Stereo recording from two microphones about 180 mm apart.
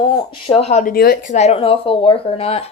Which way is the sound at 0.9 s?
60° left (ahead or behind).